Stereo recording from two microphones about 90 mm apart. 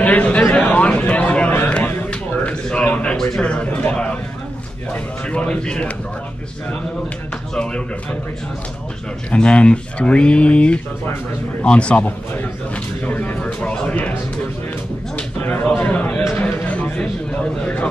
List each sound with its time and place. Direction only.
0.0 s a sound: 15° left (ahead or behind)
4.9 s speech: 15° left (ahead or behind)
7.5 s speech: 10° left (ahead or behind)
9.3 s a man's voice: 10° left (ahead or behind)
15.4 s a man's voice: 20° left (ahead or behind)
16.3 s a sound: 20° left (ahead or behind)